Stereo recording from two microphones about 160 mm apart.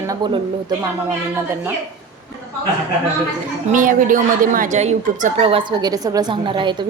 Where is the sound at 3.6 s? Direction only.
55° right (ahead or behind); by 5.9 s 35° right (ahead or behind).